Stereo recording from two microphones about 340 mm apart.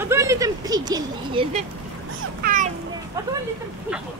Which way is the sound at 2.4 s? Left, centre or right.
Right.